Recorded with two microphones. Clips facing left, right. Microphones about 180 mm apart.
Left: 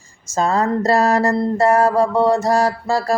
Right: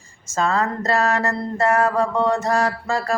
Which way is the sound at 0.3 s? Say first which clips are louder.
Left 4 dB; 40° left (ahead or behind).